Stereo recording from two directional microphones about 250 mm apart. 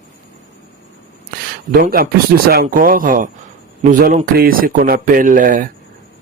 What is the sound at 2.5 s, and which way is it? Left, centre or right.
A man's voice, right.